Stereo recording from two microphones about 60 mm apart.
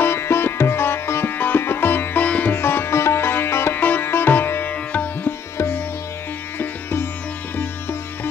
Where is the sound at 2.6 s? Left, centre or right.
Left.